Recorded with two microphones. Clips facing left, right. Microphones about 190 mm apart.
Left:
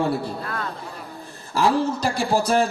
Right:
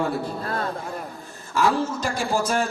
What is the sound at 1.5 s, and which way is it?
A man's voice, 35° left (ahead or behind).